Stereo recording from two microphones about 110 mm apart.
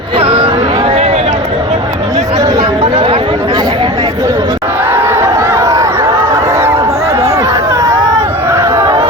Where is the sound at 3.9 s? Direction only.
30° right (ahead or behind).